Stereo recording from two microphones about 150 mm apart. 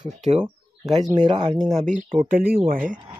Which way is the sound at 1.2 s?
30° right (ahead or behind).